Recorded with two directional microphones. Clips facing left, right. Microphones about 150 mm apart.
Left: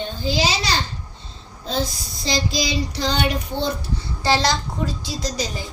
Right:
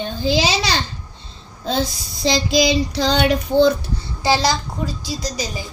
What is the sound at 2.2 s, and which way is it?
Child singing, 85° right.